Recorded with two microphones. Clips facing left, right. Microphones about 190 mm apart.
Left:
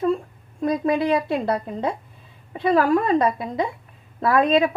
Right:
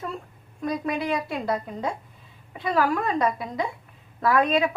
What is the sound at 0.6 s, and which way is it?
Speech, 25° left (ahead or behind).